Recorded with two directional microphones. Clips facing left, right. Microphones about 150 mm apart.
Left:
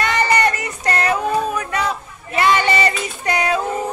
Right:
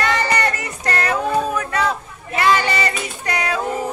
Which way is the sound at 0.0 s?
20° left (ahead or behind).